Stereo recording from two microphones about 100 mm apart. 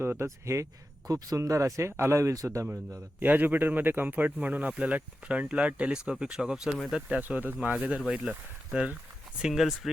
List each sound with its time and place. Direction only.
0.0 s speech: 25° right (ahead or behind)
3.2 s speech: 15° right (ahead or behind)
7.2 s speech: 15° right (ahead or behind)
8.0 s speech: centre (ahead or behind)